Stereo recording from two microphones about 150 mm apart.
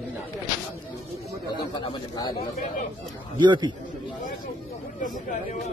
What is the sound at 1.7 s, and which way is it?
Speech, 30° left (ahead or behind).